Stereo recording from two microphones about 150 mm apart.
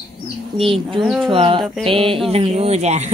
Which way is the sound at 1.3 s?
35° right (ahead or behind).